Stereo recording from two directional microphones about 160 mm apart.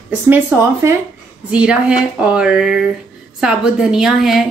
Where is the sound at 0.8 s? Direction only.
20° right (ahead or behind).